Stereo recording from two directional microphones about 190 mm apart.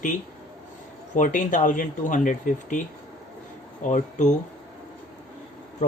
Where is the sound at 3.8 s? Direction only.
40° left (ahead or behind).